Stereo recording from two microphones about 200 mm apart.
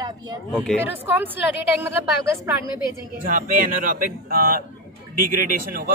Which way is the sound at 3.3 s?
40° right (ahead or behind).